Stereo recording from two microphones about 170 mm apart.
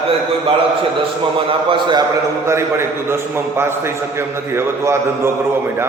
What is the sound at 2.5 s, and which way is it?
A man's voice, 15° right (ahead or behind).